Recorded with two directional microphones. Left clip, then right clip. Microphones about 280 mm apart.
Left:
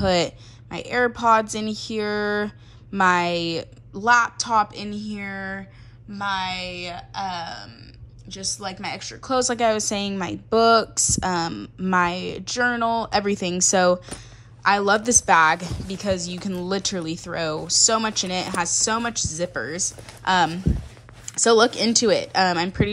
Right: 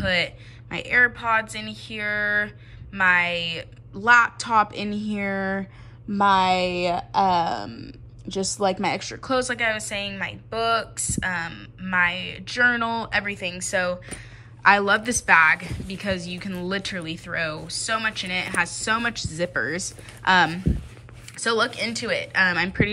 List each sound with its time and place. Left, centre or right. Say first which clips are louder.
0.0 s speech: left 2 dB; centre